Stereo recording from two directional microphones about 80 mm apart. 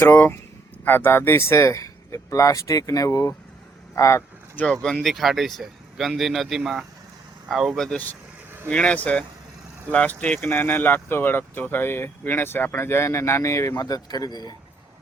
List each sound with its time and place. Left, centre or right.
0.0 s speech: left
4.6 s speech: centre
5.0 s a man's voice: centre
8.7 s speech: centre; by 14.5 s left